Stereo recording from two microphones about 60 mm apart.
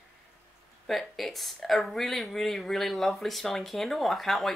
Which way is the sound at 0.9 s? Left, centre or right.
Centre.